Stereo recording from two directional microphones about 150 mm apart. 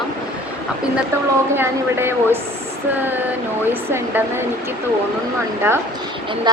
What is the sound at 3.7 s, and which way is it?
Speech, 15° right (ahead or behind).